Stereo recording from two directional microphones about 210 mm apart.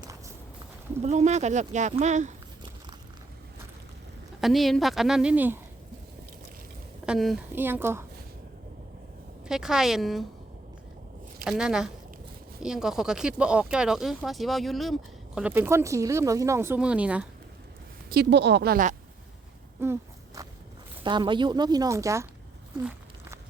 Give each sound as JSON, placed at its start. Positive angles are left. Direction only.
{"t": 1.0, "sound": "speech", "side_deg": -35}
{"t": 4.4, "sound": "speech", "side_deg": 0}
{"t": 7.0, "sound": "speech", "side_deg": 0}
{"t": 9.5, "sound": "speech", "side_deg": 0}
{"t": 11.4, "sound": "speech", "side_deg": -5}
{"t": 18.1, "sound": "speech", "side_deg": -50}
{"t": 19.8, "sound": "walk", "side_deg": -15}
{"t": 21.0, "sound": "speech", "side_deg": -20}
{"t": 22.8, "sound": "a sound", "side_deg": -5}